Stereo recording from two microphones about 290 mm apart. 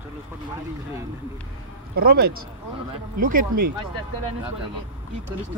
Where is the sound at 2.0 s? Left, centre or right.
Right.